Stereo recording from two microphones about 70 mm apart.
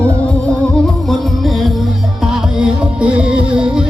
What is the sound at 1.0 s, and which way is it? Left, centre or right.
Music, centre.